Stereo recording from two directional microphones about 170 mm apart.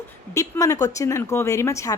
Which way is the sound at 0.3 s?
20° left (ahead or behind).